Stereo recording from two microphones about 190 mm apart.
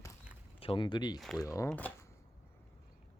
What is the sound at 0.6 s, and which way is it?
Speech, 25° left (ahead or behind).